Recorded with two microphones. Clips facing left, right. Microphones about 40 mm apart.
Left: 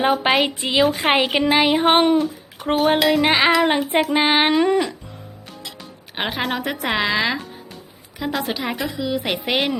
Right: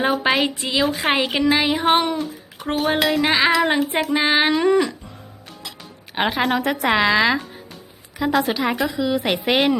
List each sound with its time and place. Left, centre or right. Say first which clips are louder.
0.0 s speech: left 1 dB; left
2.1 s a sound: left 7 dB; centre
2.6 s speech: left 3 dB; left
4.6 s music: right 1 dB; centre
6.1 s a woman's voice: right 4 dB; centre